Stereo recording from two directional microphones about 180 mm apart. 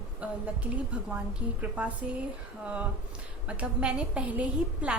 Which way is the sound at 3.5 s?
5° right (ahead or behind).